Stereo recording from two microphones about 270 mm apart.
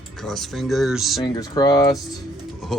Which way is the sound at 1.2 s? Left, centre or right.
Centre.